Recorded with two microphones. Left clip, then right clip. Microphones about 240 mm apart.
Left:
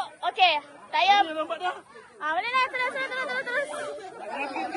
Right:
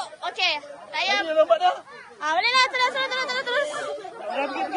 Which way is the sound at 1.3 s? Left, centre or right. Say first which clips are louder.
Right 11 dB; right.